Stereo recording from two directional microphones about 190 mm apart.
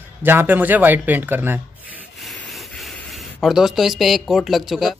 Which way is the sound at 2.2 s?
Centre (ahead or behind).